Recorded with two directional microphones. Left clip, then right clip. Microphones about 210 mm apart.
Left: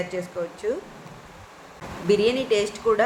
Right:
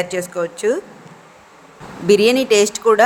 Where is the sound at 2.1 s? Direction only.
45° right (ahead or behind).